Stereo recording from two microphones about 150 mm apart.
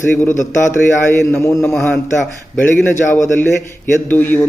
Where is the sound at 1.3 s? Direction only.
15° left (ahead or behind).